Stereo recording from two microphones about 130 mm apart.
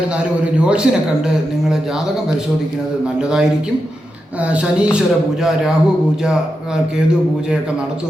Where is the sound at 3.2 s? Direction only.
5° right (ahead or behind).